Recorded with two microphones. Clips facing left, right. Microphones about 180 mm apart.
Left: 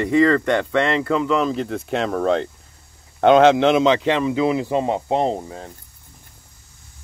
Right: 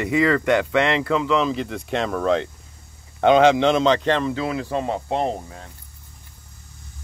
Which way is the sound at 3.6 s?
5° left (ahead or behind).